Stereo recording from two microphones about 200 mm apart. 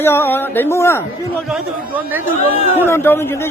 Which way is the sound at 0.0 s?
10° left (ahead or behind).